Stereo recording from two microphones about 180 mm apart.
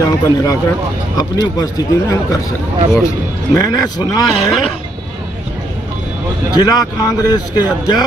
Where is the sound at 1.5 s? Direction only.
20° left (ahead or behind).